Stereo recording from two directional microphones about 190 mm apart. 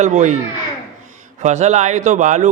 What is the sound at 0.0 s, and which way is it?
Speech, 40° right (ahead or behind).